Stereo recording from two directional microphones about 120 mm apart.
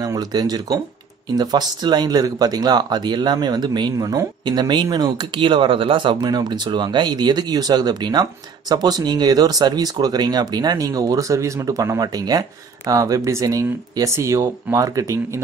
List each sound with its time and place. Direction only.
0.0 s speech: 30° right (ahead or behind)